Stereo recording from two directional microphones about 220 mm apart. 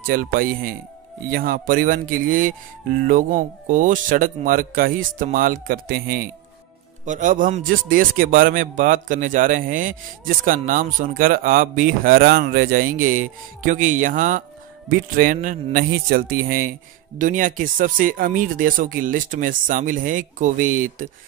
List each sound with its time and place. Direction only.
0.0 s a man's voice: 40° right (ahead or behind)